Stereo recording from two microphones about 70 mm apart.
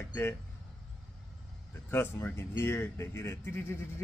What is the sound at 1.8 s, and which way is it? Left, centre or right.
Speech, left.